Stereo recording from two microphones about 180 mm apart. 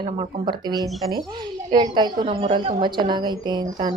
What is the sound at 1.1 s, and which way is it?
A woman's voice, 25° right (ahead or behind).